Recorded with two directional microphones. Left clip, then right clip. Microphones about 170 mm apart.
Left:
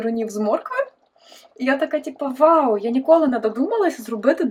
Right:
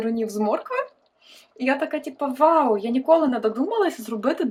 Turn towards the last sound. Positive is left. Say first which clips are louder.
# left 5 dB
turn(degrees=5)  # may be behind; listen again after turning